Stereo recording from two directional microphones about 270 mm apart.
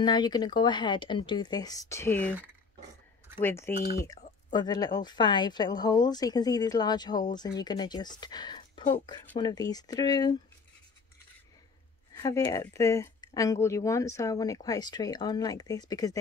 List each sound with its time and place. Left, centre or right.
0.0 s speech: centre
3.3 s speech: centre
12.1 s speech: centre